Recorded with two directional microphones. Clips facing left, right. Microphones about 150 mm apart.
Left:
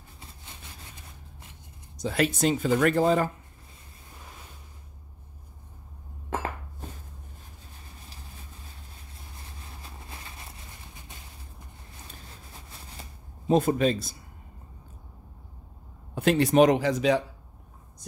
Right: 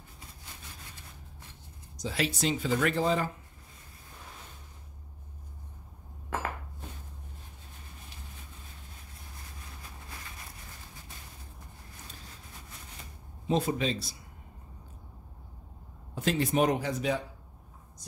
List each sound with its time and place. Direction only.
2.0 s speech: 55° left (ahead or behind)
13.0 s shuffling cards: 35° left (ahead or behind)
13.5 s speech: 50° left (ahead or behind)
16.2 s speech: 65° left (ahead or behind); by 17.2 s 90° left